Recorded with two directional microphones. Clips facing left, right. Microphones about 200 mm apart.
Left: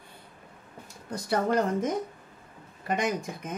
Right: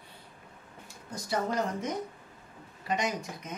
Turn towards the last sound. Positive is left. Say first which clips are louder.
# left 4 dB
turn(degrees=50)  # may be behind; listen again after turning